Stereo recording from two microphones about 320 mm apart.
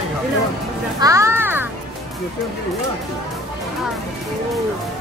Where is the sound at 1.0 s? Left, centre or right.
Centre.